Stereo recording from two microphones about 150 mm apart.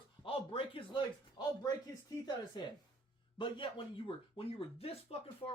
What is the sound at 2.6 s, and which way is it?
Speech, 30° left (ahead or behind).